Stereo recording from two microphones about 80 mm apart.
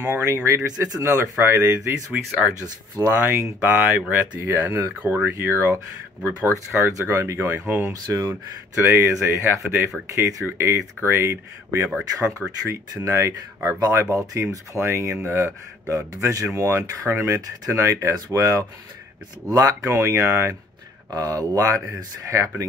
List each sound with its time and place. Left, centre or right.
0.0 s speech: right
0.8 s speech: right
3.0 s speech: right
4.1 s speech: right
7.9 s speech: right
8.7 s speech: right
10.7 s speech: right
21.1 s speech: right